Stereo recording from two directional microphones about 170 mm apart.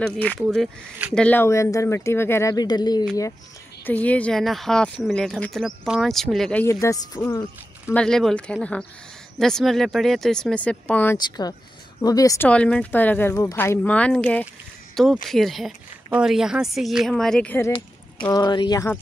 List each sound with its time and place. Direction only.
0.0 s speech: 10° left (ahead or behind); by 3.1 s 25° left (ahead or behind)
3.8 s speech: 10° left (ahead or behind)
6.6 s speech: 20° left (ahead or behind)
7.9 s speech: 5° left (ahead or behind)
11.1 s speech: 25° left (ahead or behind)
12.4 s speech: 5° left (ahead or behind)
18.3 s speech: 25° left (ahead or behind)